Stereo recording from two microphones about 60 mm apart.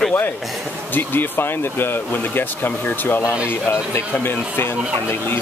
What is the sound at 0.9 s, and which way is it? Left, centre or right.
Speech, left.